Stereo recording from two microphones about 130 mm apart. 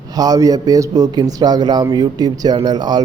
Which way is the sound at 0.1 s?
30° right (ahead or behind).